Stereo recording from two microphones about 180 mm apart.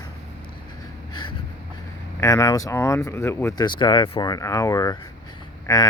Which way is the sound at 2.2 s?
20° left (ahead or behind).